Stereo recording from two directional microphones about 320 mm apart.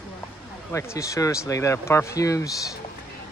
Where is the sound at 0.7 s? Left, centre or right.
Centre.